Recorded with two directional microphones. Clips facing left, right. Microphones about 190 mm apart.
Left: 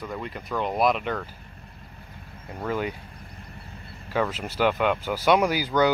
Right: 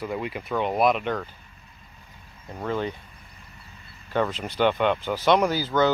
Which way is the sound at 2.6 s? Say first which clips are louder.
Even; 10° left (ahead or behind).